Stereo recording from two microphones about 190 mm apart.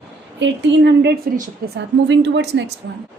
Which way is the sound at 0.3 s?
70° right (ahead or behind).